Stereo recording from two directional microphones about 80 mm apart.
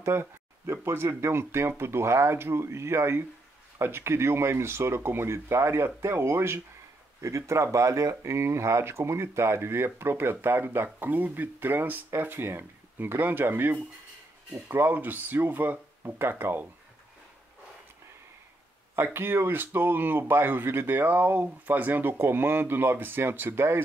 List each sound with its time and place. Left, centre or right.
0.0 s speech: right
18.9 s speech: right